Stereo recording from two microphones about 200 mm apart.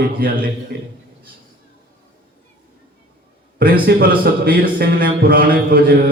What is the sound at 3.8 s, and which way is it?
Speech, 45° right (ahead or behind).